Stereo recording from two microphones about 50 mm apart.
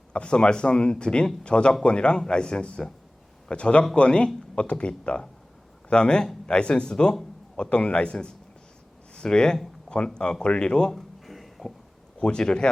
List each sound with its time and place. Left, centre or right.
0.1 s speech: centre
10.9 s a sound: centre
12.2 s speech: centre